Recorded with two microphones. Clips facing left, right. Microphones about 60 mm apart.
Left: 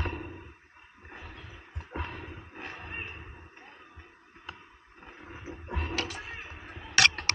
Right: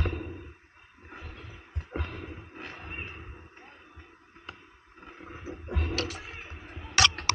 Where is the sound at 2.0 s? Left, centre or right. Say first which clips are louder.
Even; left.